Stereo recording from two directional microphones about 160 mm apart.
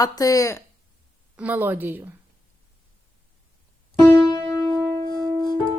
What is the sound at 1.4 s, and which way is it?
Speech, 10° right (ahead or behind).